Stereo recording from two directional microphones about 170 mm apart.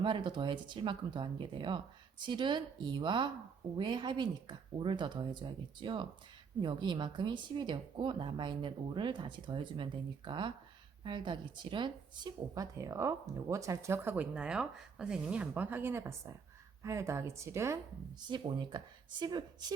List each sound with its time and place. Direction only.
0.0 s speech: 30° right (ahead or behind)
18.3 s speech: 25° right (ahead or behind)